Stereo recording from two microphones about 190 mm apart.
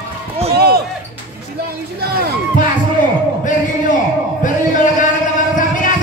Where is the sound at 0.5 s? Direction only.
55° right (ahead or behind).